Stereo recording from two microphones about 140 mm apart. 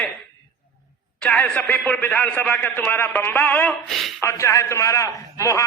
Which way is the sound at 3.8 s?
Centre (ahead or behind).